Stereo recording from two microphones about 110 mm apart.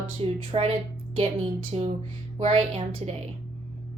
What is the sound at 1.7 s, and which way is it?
A woman's voice, 65° right (ahead or behind).